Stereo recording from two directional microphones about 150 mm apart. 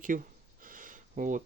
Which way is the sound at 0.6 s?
65° right (ahead or behind).